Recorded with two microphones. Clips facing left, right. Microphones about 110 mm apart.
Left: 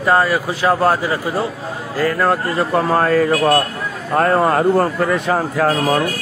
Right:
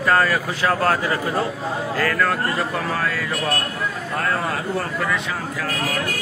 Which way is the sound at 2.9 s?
45° left (ahead or behind).